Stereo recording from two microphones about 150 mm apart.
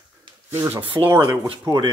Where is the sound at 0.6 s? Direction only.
15° right (ahead or behind).